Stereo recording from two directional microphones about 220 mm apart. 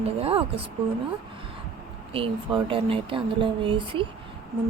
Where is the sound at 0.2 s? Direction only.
25° right (ahead or behind).